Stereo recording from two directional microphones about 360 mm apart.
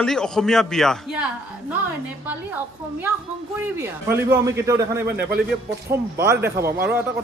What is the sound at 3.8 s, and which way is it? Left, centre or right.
Speech, centre.